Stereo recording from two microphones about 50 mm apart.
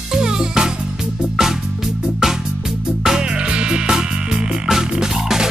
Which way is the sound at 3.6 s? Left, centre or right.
Centre.